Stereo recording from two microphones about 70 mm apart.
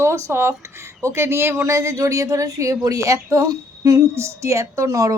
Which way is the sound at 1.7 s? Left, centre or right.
Right.